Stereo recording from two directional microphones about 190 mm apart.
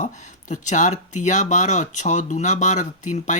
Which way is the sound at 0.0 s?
40° left (ahead or behind).